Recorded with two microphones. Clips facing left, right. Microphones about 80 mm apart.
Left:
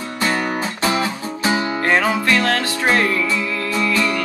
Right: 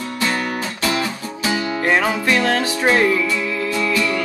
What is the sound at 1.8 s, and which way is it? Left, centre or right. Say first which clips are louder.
Music: even; centre.